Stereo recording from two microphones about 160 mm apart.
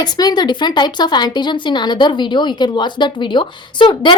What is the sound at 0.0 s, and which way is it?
Speech, 25° left (ahead or behind).